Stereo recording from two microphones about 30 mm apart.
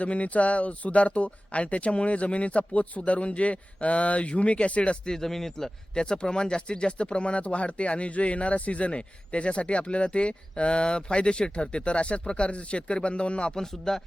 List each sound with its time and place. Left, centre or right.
0.0 s speech: left
5.0 s speech: centre
5.9 s speech: left
8.9 s speech: left
13.6 s speech: centre